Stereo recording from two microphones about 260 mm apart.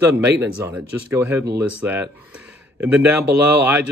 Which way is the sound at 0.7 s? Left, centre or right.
Centre.